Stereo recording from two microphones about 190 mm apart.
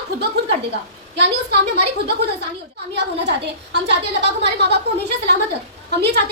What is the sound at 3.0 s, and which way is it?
A woman's voice, 65° right (ahead or behind).